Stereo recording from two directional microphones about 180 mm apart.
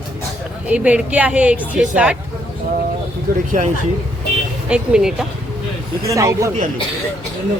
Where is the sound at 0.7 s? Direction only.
5° right (ahead or behind).